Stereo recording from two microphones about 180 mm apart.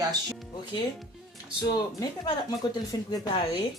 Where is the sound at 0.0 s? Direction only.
20° right (ahead or behind).